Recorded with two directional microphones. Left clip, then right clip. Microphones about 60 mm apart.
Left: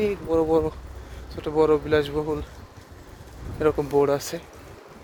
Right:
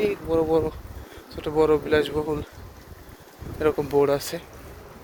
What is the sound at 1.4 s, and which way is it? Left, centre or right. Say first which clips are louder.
Speech: even; left.